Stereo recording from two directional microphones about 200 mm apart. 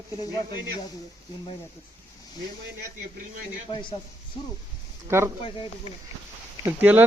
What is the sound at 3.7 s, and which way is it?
Speech, 25° left (ahead or behind).